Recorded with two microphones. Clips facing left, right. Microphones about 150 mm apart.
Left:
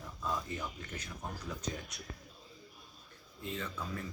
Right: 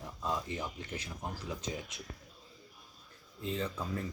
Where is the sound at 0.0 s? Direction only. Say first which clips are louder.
Right 2 dB; 25° right (ahead or behind).